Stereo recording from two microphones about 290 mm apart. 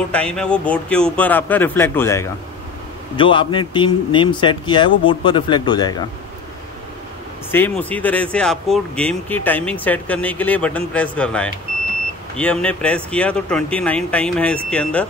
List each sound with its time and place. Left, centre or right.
0.1 s a man's voice: centre
7.5 s speech: centre